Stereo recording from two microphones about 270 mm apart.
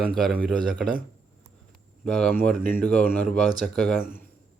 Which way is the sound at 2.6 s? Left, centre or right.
Right.